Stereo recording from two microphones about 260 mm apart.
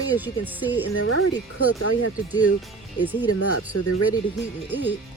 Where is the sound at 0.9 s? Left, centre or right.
Left.